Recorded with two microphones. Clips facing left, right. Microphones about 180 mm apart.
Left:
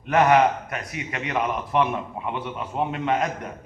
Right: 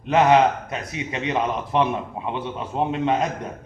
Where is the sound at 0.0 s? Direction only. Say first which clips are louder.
Right 2 dB; 20° right (ahead or behind).